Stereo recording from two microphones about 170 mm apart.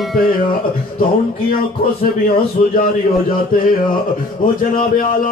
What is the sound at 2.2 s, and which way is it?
Speech, 55° left (ahead or behind).